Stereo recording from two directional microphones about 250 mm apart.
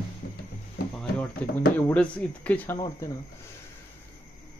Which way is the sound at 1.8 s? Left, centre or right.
Centre.